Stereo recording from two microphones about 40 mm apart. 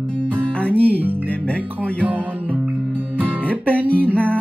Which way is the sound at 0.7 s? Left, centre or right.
Right.